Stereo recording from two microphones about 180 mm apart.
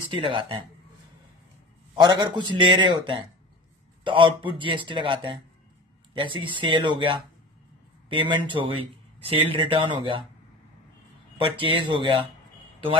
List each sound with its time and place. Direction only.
0.1 s a man's voice: 30° right (ahead or behind)
2.0 s a man's voice: 25° right (ahead or behind)
11.4 s a man's voice: 30° right (ahead or behind)